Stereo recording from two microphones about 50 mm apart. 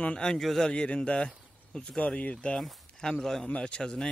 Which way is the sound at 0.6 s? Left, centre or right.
Left.